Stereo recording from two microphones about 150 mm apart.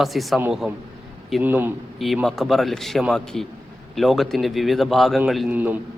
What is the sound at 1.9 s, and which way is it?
A man's voice, centre (ahead or behind).